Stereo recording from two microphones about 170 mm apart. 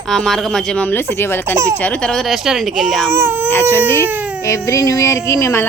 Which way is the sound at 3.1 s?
15° right (ahead or behind).